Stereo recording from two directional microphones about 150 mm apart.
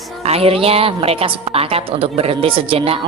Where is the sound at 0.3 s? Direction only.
40° right (ahead or behind).